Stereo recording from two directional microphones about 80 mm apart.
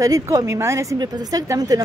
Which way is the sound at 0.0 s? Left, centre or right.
Right.